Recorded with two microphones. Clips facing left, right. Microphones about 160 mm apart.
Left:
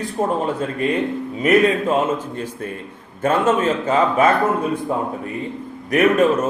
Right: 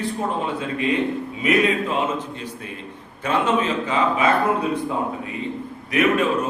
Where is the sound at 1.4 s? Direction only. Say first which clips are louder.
Left 4 dB; 45° left (ahead or behind).